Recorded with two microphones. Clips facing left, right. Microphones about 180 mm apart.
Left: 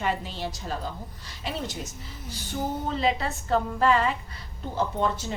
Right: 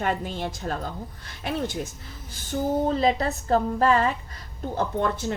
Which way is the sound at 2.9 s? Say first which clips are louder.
Right 4 dB; 40° right (ahead or behind).